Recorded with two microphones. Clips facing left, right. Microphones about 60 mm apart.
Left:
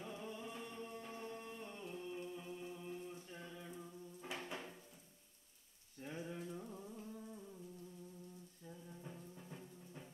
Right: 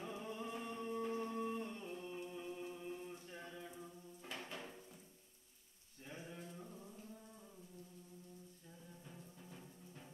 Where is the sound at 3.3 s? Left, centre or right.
Centre.